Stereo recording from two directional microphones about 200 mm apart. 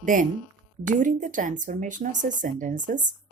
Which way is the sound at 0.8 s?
40° right (ahead or behind).